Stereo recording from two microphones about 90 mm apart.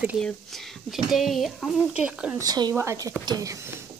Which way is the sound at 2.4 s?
45° right (ahead or behind).